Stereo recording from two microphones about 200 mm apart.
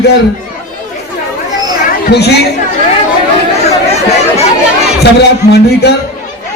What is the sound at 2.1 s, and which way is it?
Speech, 55° left (ahead or behind).